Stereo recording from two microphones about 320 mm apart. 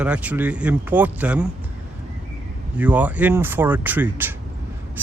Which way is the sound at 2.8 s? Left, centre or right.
Centre.